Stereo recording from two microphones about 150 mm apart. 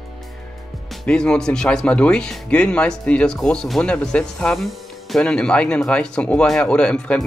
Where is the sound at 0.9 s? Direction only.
5° left (ahead or behind).